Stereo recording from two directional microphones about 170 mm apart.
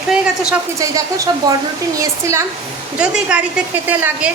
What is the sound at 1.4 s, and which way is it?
Speech, 25° right (ahead or behind).